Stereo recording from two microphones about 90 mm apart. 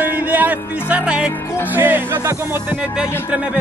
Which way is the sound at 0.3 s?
15° right (ahead or behind).